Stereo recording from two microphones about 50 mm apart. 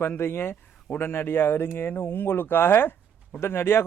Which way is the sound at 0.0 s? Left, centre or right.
Left.